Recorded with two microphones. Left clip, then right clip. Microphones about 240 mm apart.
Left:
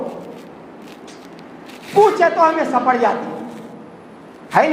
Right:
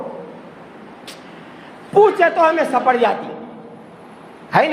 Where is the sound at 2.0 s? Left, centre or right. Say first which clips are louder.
Left 1 dB; right.